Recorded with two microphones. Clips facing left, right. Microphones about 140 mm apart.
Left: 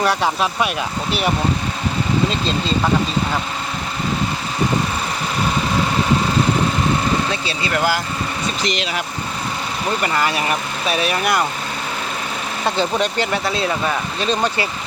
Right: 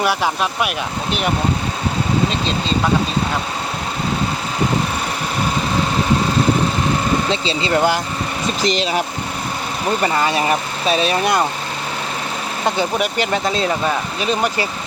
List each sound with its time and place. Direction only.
0.0 s speech: centre (ahead or behind)
7.3 s speech: 25° right (ahead or behind)
8.6 s speech: 35° right (ahead or behind)
12.6 s speech: 15° right (ahead or behind)